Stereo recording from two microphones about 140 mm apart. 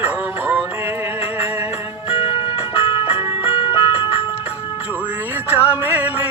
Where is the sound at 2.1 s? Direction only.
40° left (ahead or behind).